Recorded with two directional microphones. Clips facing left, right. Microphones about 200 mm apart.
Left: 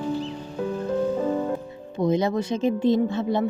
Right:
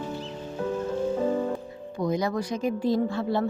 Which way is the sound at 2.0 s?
25° left (ahead or behind).